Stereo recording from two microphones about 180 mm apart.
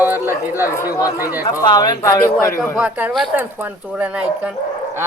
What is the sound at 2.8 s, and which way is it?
Speech, 10° right (ahead or behind).